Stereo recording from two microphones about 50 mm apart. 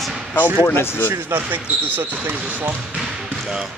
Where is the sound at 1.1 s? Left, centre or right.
Right.